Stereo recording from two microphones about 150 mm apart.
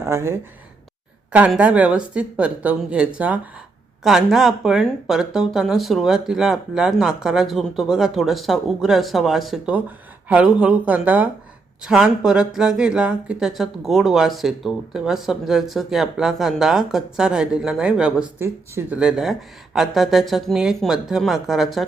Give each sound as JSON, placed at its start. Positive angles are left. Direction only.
{"t": 0.0, "sound": "speech", "side_deg": -15}
{"t": 18.4, "sound": "speech", "side_deg": -15}
{"t": 18.9, "sound": "speech", "side_deg": -5}